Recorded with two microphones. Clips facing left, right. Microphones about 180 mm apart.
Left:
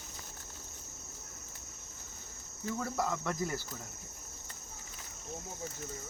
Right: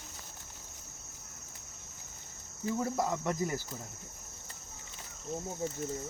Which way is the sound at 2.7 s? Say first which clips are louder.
Right 3 dB; 20° right (ahead or behind).